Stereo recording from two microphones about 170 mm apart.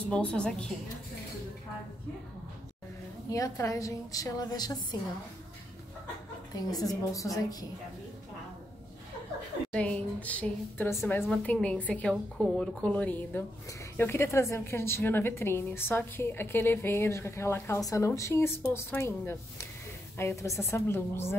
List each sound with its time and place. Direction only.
0.1 s a woman's voice: 5° left (ahead or behind)
3.3 s a woman's voice: 20° left (ahead or behind)
6.5 s a woman's voice: 20° left (ahead or behind)
9.7 s a woman's voice: 5° left (ahead or behind)